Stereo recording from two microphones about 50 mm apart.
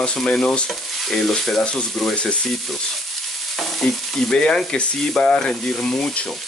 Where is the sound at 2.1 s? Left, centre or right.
Left.